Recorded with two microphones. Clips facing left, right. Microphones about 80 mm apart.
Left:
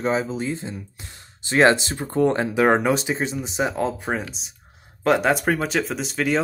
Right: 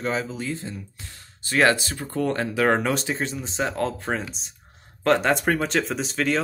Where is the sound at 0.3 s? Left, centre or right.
Left.